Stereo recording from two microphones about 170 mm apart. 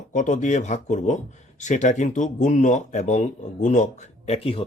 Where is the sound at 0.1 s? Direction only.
50° left (ahead or behind).